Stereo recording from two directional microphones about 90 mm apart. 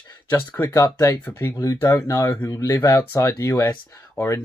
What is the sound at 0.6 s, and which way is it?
Speech, 40° left (ahead or behind).